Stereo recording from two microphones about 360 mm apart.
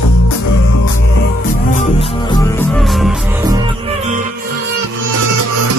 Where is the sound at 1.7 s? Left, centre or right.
Centre.